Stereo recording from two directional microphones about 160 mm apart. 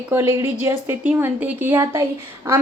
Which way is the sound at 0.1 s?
15° right (ahead or behind).